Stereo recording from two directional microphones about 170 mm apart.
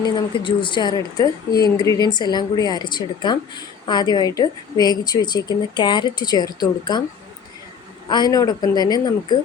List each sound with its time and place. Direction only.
0.0 s a woman's voice: 25° left (ahead or behind)
8.1 s a woman's voice: 25° left (ahead or behind)